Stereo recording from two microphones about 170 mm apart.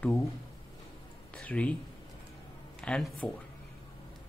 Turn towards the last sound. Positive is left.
turn(degrees=5)  # may be behind; listen again after turning